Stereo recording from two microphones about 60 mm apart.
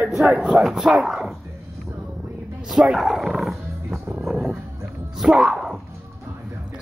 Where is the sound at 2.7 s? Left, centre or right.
Centre.